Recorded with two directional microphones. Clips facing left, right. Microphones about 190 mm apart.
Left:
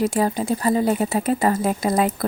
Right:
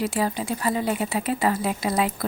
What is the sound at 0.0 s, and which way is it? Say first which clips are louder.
Speech: left 4 dB; 45° left (ahead or behind).